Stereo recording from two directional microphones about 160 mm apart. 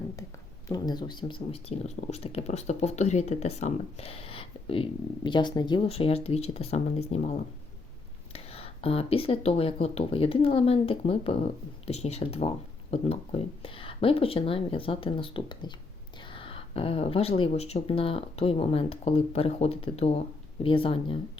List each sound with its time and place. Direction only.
0.7 s speech: 25° left (ahead or behind)